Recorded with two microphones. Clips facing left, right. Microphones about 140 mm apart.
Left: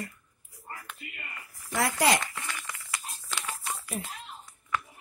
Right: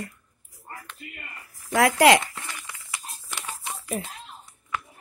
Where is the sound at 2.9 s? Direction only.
20° right (ahead or behind).